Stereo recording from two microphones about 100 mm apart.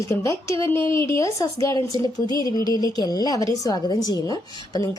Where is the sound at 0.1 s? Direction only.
35° left (ahead or behind).